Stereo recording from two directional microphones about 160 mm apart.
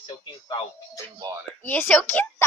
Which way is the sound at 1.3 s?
25° right (ahead or behind).